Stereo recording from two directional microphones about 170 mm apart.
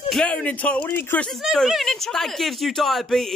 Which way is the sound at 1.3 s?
Centre (ahead or behind).